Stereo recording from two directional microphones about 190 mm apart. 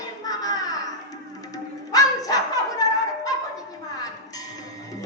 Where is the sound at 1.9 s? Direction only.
20° left (ahead or behind).